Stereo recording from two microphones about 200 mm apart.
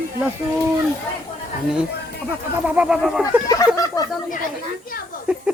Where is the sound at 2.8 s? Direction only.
5° right (ahead or behind).